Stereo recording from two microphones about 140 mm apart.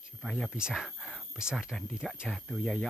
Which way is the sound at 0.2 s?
Centre (ahead or behind).